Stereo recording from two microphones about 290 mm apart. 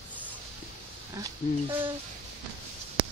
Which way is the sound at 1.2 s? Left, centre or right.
Centre.